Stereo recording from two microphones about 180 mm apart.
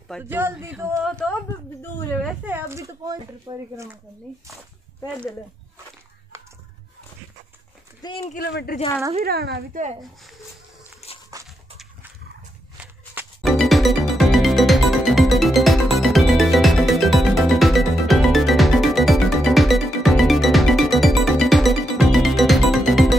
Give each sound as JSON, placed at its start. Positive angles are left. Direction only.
{"t": 0.2, "sound": "speech", "side_deg": -10}
{"t": 1.0, "sound": "speech", "side_deg": 5}
{"t": 2.2, "sound": "speech", "side_deg": -10}
{"t": 8.0, "sound": "speech", "side_deg": 20}
{"t": 8.4, "sound": "speech", "side_deg": 60}
{"t": 9.2, "sound": "speech", "side_deg": -60}
{"t": 11.1, "sound": "a sound", "side_deg": 35}
{"t": 11.4, "sound": "a sound", "side_deg": 0}
{"t": 13.4, "sound": "music", "side_deg": 0}